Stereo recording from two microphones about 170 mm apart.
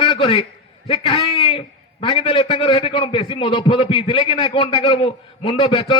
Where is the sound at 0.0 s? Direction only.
30° left (ahead or behind).